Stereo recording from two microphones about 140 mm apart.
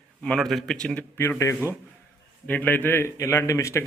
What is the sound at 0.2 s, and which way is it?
Speech, 5° left (ahead or behind).